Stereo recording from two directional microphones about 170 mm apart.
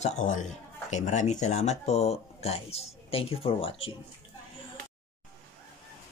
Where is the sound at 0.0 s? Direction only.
45° left (ahead or behind).